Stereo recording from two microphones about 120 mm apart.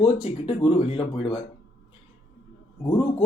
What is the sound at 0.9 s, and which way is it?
Speech, 45° left (ahead or behind).